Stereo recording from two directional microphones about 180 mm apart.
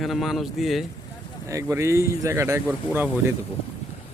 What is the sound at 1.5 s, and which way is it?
Speech, 15° right (ahead or behind).